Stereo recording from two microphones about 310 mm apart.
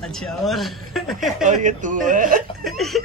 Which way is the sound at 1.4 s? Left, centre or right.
Right.